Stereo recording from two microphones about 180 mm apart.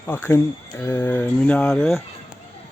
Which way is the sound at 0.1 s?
15° left (ahead or behind).